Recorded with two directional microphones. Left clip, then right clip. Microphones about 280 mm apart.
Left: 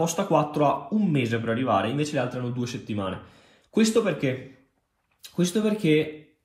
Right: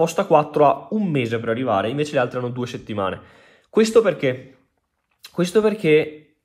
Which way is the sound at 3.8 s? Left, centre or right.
Centre.